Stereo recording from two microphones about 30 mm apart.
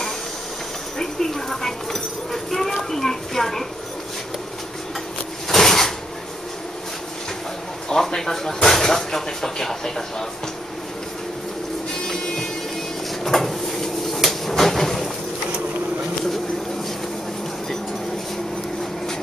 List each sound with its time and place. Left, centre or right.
0.9 s a sound: centre
5.5 s drawer open or close: centre
7.9 s speech: centre
11.9 s music: centre
13.2 s a sound: centre
14.5 s train: centre